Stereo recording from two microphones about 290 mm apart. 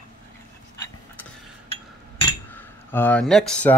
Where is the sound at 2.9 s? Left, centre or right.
Centre.